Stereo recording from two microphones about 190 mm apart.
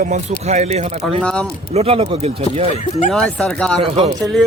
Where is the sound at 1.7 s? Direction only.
30° right (ahead or behind).